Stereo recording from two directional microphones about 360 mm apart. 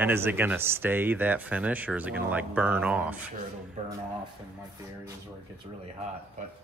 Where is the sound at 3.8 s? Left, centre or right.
Centre.